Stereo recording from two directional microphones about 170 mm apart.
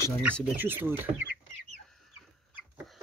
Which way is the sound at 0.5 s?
10° right (ahead or behind).